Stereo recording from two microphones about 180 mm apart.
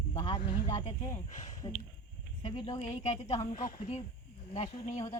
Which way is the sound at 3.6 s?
45° left (ahead or behind).